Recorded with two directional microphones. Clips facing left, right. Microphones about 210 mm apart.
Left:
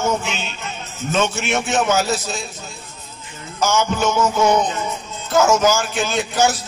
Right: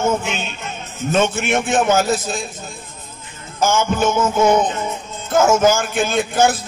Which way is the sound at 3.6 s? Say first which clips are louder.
Right 2 dB; 50° right (ahead or behind).